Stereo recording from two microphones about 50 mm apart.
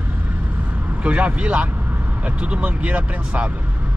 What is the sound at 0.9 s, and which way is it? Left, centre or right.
Speech, right.